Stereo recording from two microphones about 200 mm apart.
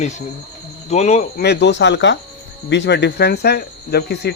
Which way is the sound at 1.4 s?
55° left (ahead or behind).